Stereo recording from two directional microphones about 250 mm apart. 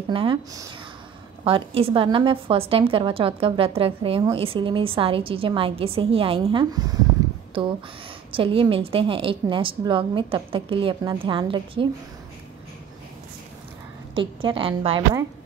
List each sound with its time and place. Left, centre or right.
0.1 s a woman's voice: right
8.3 s a woman's voice: right
14.1 s a woman's voice: right